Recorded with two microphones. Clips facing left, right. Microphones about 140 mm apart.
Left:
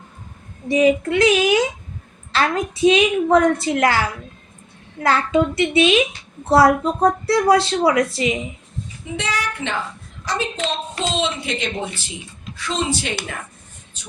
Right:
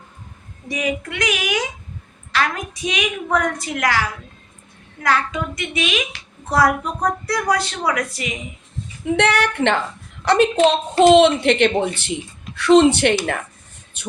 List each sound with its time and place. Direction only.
0.7 s a woman's voice: 30° left (ahead or behind)
5.0 s a woman's voice: 30° left (ahead or behind)
9.0 s speech: 65° right (ahead or behind)
14.0 s beatboxing: 65° right (ahead or behind)